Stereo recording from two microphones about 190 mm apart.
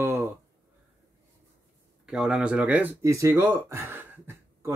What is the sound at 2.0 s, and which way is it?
Speech, 5° right (ahead or behind).